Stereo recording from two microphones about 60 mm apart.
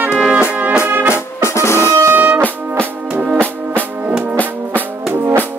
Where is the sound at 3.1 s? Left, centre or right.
Centre.